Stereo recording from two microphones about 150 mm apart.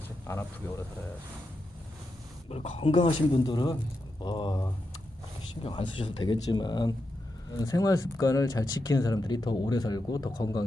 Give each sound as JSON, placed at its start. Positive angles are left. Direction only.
{"t": 0.3, "sound": "speech", "side_deg": 15}
{"t": 2.5, "sound": "speech", "side_deg": 40}